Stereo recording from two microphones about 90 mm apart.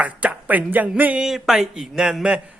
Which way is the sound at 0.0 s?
15° right (ahead or behind).